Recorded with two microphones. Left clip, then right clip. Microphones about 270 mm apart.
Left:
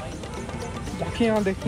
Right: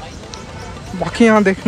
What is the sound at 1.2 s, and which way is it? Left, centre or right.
Speech, right.